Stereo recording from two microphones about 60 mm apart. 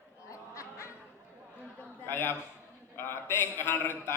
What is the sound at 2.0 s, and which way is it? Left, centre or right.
A man's voice, left.